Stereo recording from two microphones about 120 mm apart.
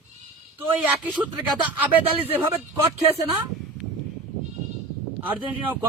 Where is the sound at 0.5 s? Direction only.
15° right (ahead or behind).